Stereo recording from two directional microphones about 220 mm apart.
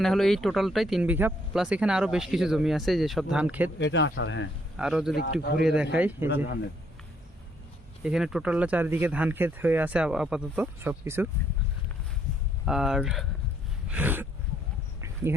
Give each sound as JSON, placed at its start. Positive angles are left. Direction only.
{"t": 0.0, "sound": "speech", "side_deg": 0}
{"t": 3.8, "sound": "speech", "side_deg": 55}
{"t": 4.8, "sound": "speech", "side_deg": -5}
{"t": 5.1, "sound": "speech", "side_deg": 45}
{"t": 5.6, "sound": "speech", "side_deg": -5}
{"t": 8.0, "sound": "speech", "side_deg": 0}
{"t": 12.6, "sound": "speech", "side_deg": 0}
{"t": 13.8, "sound": "a sound", "side_deg": -5}
{"t": 15.0, "sound": "insect", "side_deg": -10}